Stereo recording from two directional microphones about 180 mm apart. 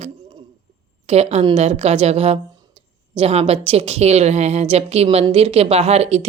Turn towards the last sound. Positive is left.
turn(degrees=-35)  # may be behind; listen again after turning